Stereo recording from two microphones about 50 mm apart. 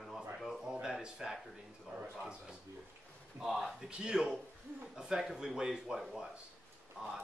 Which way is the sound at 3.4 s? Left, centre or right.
Centre.